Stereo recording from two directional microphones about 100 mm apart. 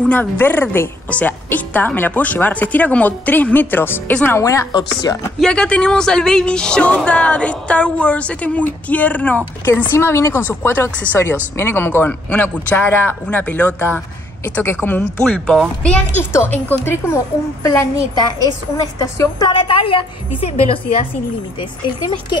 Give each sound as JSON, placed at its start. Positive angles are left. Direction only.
{"t": 0.0, "sound": "a woman's voice", "side_deg": 15}
{"t": 4.4, "sound": "a woman's voice", "side_deg": 30}
{"t": 5.4, "sound": "a woman's voice", "side_deg": 10}
{"t": 9.9, "sound": "a man's voice", "side_deg": 25}
{"t": 16.2, "sound": "a man's voice", "side_deg": 25}
{"t": 19.8, "sound": "a woman's voice", "side_deg": 70}